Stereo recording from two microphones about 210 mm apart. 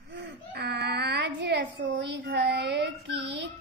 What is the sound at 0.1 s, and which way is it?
Baby cry, 55° right (ahead or behind).